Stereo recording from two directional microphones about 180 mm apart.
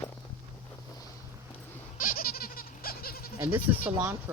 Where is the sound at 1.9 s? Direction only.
50° left (ahead or behind).